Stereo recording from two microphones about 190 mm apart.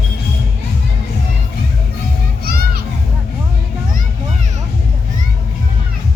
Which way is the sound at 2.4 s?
55° right (ahead or behind).